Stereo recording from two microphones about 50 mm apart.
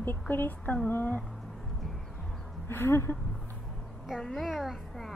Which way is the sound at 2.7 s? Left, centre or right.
Left.